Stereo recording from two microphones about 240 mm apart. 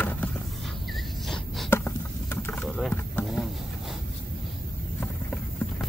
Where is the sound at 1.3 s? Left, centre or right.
Centre.